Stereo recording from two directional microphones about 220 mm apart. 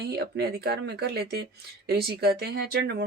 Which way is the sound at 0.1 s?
45° right (ahead or behind).